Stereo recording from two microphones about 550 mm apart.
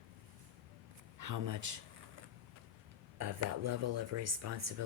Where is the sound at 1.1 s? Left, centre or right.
Right.